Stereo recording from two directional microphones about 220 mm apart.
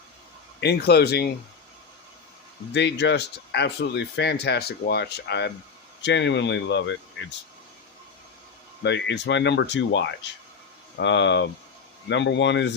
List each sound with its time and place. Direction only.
0.6 s speech: 50° left (ahead or behind)
2.7 s speech: 50° left (ahead or behind)
8.8 s speech: 55° left (ahead or behind)